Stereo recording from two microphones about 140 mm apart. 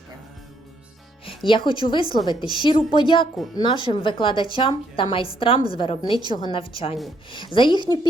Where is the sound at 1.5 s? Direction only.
35° left (ahead or behind).